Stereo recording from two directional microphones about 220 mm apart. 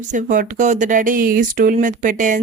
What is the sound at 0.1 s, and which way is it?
Speech, 35° right (ahead or behind).